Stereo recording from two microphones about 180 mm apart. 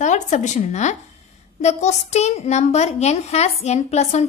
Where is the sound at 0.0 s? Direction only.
40° left (ahead or behind).